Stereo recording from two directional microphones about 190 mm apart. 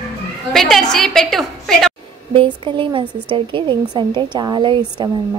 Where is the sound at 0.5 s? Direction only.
Centre (ahead or behind).